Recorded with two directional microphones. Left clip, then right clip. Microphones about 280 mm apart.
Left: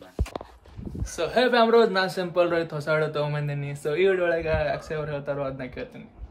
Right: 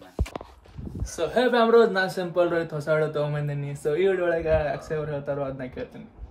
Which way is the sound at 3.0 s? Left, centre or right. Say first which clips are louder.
Right 1 dB; centre.